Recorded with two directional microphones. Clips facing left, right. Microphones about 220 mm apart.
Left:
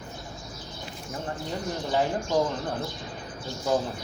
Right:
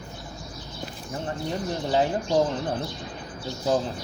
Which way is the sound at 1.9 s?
20° right (ahead or behind).